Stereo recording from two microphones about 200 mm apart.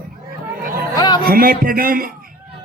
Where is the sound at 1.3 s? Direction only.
45° right (ahead or behind).